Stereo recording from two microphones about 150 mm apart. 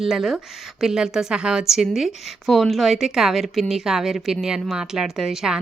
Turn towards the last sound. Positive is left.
turn(degrees=-5)  # may be behind; listen again after turning